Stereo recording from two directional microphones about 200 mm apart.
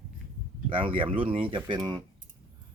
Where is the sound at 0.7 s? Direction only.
25° right (ahead or behind).